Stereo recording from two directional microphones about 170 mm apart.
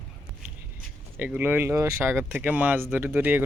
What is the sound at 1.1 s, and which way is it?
Speech, 10° right (ahead or behind).